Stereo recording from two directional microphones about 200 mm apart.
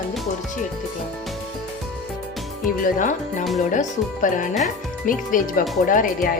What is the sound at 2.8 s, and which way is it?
Speech, 40° left (ahead or behind).